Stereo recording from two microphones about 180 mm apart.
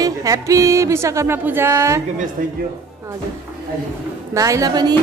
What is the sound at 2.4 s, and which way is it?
Speech, 50° right (ahead or behind).